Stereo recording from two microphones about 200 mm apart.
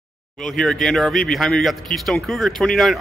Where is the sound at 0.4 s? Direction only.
5° left (ahead or behind).